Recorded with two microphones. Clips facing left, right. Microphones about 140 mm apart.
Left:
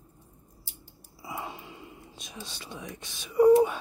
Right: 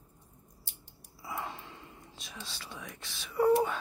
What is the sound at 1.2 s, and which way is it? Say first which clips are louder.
Whispering: left 1 dB; 15° left (ahead or behind).